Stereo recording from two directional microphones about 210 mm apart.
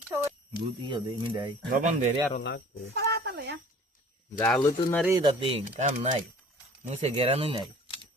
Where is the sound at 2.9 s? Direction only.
50° right (ahead or behind).